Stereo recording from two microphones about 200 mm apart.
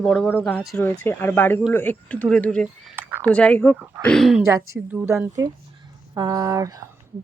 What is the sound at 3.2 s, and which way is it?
Speech, 5° left (ahead or behind).